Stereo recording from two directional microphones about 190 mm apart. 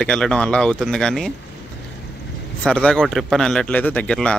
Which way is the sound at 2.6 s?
5° left (ahead or behind).